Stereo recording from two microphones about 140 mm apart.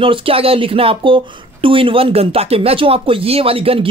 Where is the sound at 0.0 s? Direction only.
40° right (ahead or behind).